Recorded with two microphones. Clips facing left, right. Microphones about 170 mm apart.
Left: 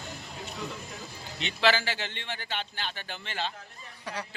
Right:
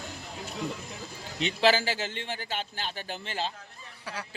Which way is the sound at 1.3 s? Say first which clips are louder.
Right 2 dB; 40° right (ahead or behind).